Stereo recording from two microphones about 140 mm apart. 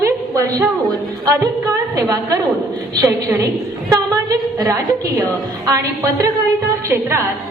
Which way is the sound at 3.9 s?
25° right (ahead or behind).